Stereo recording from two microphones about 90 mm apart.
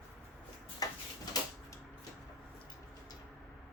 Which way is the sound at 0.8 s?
45° left (ahead or behind).